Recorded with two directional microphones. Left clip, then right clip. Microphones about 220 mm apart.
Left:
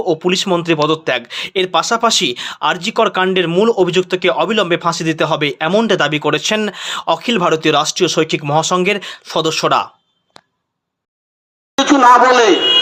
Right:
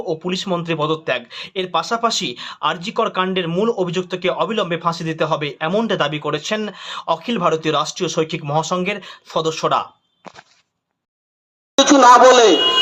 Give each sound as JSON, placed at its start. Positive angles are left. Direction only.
{"t": 0.0, "sound": "speech", "side_deg": 25}
{"t": 11.9, "sound": "speech", "side_deg": -45}